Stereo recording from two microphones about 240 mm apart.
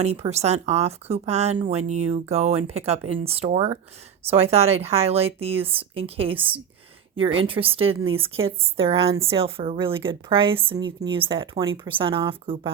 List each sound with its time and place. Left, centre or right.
0.0 s a woman's voice: right